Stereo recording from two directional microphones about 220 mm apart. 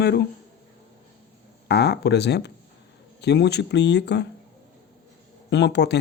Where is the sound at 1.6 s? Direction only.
50° left (ahead or behind).